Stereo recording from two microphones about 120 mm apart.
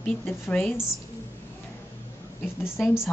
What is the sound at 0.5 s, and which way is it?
Speech, 15° left (ahead or behind).